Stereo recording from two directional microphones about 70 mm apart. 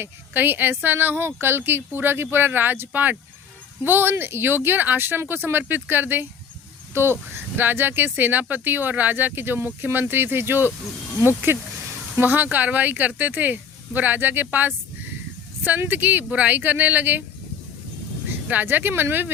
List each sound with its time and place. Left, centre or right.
0.0 s speech: right
18.4 s speech: right